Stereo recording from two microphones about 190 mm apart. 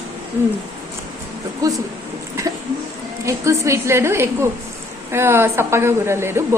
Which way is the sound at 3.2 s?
15° right (ahead or behind).